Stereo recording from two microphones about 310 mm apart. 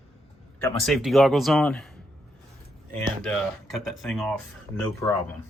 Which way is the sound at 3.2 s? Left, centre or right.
Centre.